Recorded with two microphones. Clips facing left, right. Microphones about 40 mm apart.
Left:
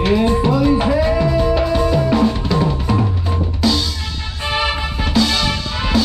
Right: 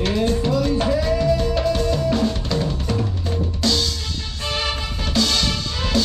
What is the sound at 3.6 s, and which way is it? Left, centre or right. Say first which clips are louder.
Drum kit: left 4 dB; centre.